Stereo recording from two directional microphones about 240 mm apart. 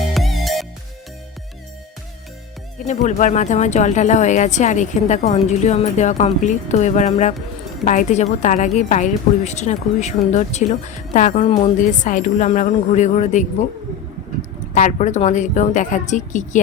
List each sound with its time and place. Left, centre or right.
0.0 s music: centre
2.8 s a woman's voice: left
14.7 s a woman's voice: left